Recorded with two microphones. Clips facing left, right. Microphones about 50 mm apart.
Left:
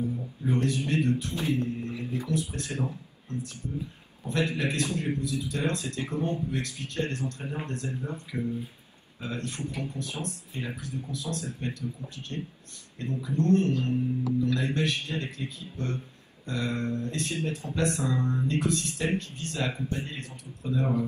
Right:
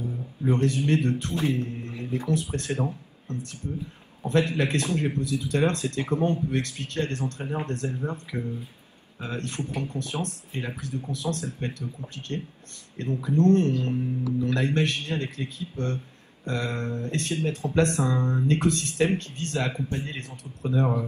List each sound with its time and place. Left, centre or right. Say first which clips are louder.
0.5 s a man's voice: right 4 dB; right
20.6 s speech: right 3 dB; right